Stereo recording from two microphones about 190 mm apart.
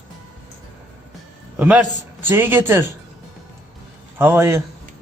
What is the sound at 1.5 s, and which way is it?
Speech, 10° right (ahead or behind).